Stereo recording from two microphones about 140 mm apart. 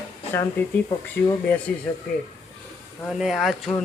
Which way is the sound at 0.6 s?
15° left (ahead or behind).